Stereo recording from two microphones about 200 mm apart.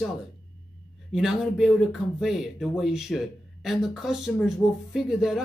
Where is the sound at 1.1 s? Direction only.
Centre (ahead or behind).